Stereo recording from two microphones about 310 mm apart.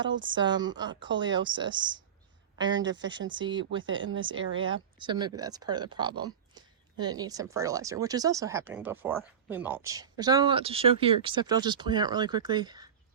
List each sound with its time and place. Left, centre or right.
0.0 s speech: right
0.3 s speech: centre
3.8 s speech: right
4.9 s speech: centre